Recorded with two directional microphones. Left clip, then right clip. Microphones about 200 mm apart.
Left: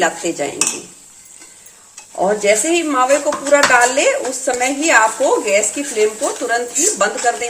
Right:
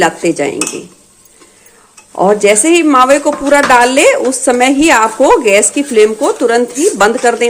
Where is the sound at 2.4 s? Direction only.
40° right (ahead or behind).